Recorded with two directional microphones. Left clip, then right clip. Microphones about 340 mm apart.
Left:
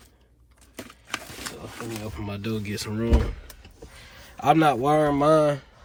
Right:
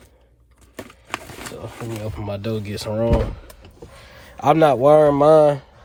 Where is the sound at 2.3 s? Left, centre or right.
Centre.